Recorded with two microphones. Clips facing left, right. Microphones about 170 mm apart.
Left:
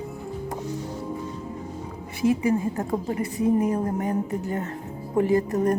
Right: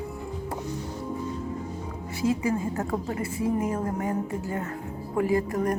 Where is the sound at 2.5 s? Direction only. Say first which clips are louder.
Left 3 dB; 20° left (ahead or behind).